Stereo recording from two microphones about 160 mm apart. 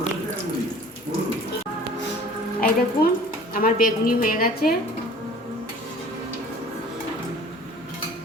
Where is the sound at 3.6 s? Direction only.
60° left (ahead or behind).